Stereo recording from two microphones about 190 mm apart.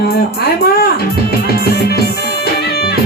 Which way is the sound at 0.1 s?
55° left (ahead or behind).